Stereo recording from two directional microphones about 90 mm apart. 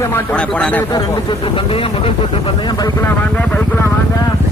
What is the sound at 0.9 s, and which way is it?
Speech, 65° left (ahead or behind).